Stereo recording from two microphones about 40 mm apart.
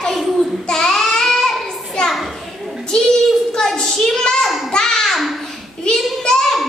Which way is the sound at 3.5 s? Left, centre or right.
Centre.